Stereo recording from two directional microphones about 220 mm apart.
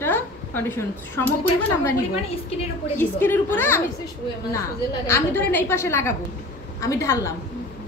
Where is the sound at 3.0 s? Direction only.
10° left (ahead or behind).